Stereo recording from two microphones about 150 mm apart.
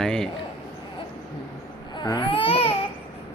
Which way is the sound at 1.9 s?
30° left (ahead or behind).